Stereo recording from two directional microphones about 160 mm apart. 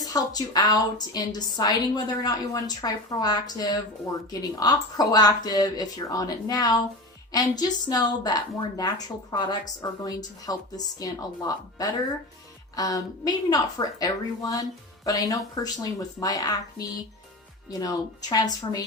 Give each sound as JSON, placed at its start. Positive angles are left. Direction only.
{"t": 0.0, "sound": "a woman's voice", "side_deg": 25}